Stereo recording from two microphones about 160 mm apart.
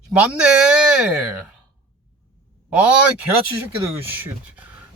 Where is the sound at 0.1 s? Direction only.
5° right (ahead or behind).